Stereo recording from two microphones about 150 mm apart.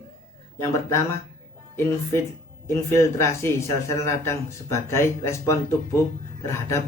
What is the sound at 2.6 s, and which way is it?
Speech, 20° left (ahead or behind).